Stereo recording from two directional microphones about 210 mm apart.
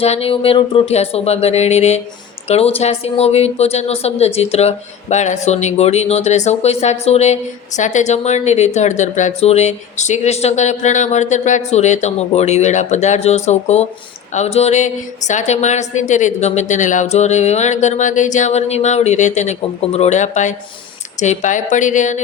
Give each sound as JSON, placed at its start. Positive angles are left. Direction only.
{"t": 0.0, "sound": "a woman's voice", "side_deg": 30}